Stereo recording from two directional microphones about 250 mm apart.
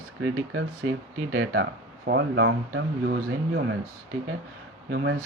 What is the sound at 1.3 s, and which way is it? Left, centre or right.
Speech, right.